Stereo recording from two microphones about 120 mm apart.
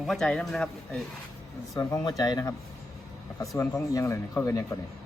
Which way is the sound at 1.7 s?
35° left (ahead or behind).